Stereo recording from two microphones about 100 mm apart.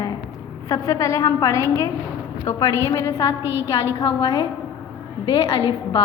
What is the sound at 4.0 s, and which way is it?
A woman's voice, 45° left (ahead or behind).